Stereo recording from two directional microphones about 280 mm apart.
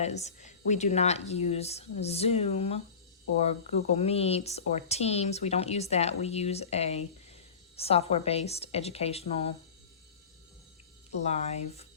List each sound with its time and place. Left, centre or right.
0.0 s speech: left
3.9 s speech: left
11.1 s speech: left